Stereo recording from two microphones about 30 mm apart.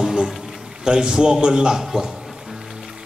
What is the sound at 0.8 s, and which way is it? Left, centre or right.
A man's voice, right.